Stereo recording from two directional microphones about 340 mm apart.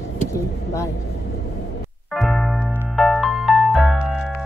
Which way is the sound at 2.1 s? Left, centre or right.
Centre.